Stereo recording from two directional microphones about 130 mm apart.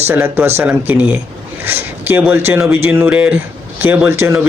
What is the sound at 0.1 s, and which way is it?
Speech, 15° right (ahead or behind).